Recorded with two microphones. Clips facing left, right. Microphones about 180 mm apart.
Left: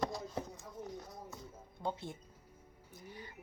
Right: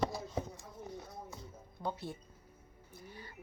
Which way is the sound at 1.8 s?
20° left (ahead or behind).